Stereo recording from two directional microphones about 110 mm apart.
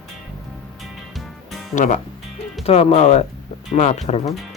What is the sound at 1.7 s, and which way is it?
Speech, 80° left.